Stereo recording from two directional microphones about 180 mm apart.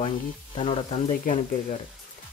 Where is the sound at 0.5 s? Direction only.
30° left (ahead or behind).